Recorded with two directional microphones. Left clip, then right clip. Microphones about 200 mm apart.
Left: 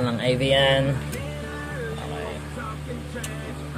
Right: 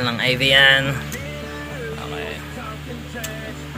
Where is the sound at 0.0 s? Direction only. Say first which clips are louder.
Right 5 dB; 15° left (ahead or behind).